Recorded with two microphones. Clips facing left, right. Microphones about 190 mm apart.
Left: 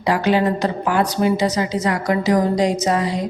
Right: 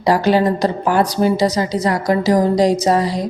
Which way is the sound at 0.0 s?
35° right (ahead or behind).